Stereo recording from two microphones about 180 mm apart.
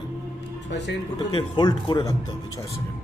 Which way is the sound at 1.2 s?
25° left (ahead or behind).